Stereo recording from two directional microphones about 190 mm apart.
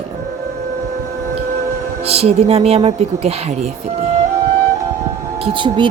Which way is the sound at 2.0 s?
35° right (ahead or behind).